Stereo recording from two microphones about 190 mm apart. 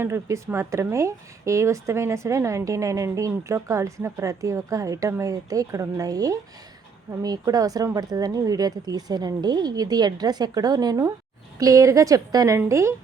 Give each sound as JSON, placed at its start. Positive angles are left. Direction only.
{"t": 0.0, "sound": "a woman's voice", "side_deg": -15}